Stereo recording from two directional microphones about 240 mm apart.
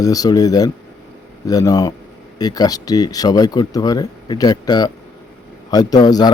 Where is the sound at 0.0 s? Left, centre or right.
Centre.